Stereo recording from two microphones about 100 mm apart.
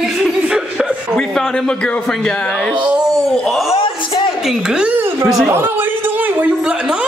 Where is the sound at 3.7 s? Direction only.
60° left (ahead or behind).